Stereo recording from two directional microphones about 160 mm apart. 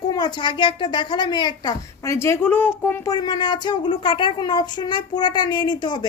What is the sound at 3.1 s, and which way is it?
Speech, 25° left (ahead or behind).